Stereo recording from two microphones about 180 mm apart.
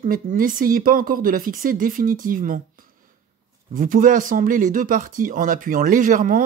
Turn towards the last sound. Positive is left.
turn(degrees=-50)  # may be behind; listen again after turning